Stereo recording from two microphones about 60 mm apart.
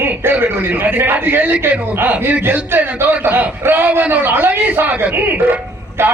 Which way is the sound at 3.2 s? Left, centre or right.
Right.